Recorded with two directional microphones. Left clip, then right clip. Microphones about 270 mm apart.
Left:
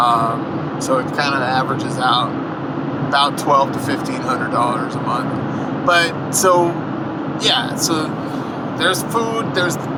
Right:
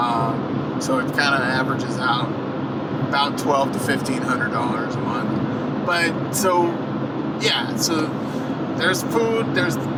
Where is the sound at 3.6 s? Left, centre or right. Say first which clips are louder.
Left 4 dB; centre.